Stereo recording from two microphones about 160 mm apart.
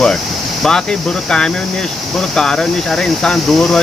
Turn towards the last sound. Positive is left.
turn(degrees=5)  # may be behind; listen again after turning